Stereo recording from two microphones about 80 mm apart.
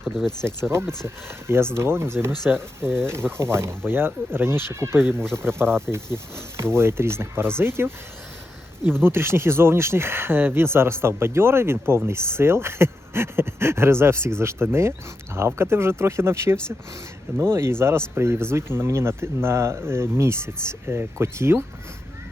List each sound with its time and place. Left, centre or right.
0.0 s speech: centre
0.7 s speech: right